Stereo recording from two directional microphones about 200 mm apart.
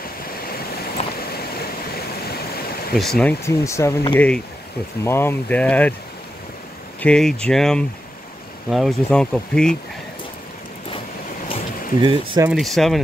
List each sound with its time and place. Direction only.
1.2 s stream: 50° left (ahead or behind)
3.0 s speech: 5° left (ahead or behind)
7.0 s speech: 5° left (ahead or behind)
12.0 s speech: 20° right (ahead or behind)
12.4 s speech: centre (ahead or behind)